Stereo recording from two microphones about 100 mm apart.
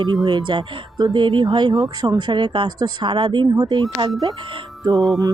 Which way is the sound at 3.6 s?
40° right (ahead or behind).